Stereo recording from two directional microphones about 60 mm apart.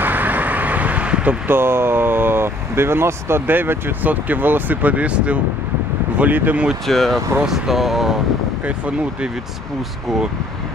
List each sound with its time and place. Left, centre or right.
0.0 s vehicle: right
1.5 s speech: right
6.9 s speech: centre
8.6 s speech: right